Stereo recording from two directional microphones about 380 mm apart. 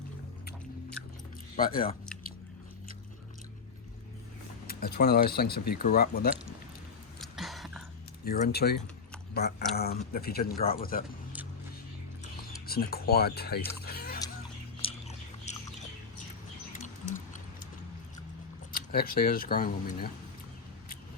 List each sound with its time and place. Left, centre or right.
1.5 s speech: left
4.6 s speech: left
7.2 s a sound: centre
8.2 s speech: left
12.6 s speech: left
14.8 s biting: centre
18.7 s speech: left